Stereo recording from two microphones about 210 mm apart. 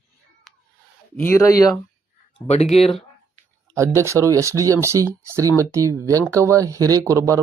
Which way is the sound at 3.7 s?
15° right (ahead or behind).